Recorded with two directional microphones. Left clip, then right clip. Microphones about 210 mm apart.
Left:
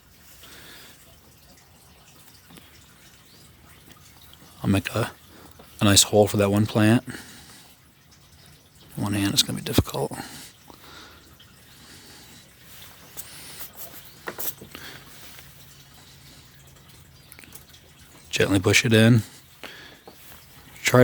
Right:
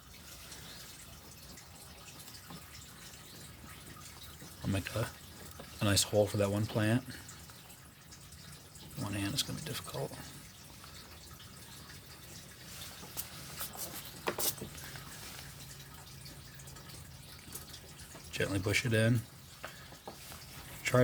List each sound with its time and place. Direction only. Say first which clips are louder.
4.6 s speech: left 12 dB; 50° left (ahead or behind)
9.0 s speech: left 14 dB; 50° left (ahead or behind)
18.3 s speech: left 14 dB; 50° left (ahead or behind)
20.8 s a sound: left 11 dB; 50° left (ahead or behind)